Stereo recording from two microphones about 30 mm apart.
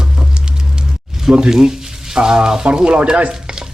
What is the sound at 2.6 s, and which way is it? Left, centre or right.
Speech, right.